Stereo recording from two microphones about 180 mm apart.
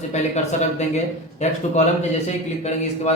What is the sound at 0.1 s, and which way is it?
A man's voice, 40° left (ahead or behind).